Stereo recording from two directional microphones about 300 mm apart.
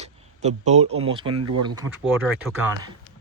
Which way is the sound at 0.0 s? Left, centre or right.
Right.